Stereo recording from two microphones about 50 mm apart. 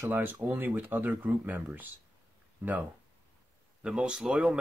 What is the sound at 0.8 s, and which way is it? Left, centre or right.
Speech, right.